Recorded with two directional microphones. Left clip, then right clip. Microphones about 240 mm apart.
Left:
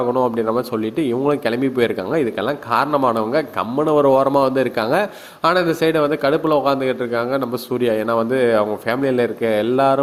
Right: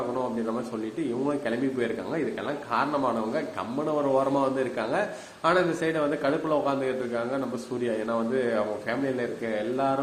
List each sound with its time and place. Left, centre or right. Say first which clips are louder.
0.9 s speech: left 10 dB; left